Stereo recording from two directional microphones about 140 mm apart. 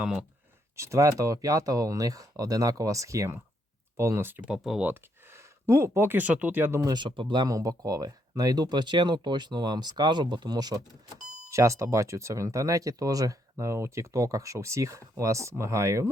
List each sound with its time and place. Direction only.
0.0 s speech: 5° right (ahead or behind)
0.8 s speech: 20° right (ahead or behind); by 4.9 s 5° right (ahead or behind)
4.9 s speech: 20° right (ahead or behind)
6.9 s speech: 35° right (ahead or behind)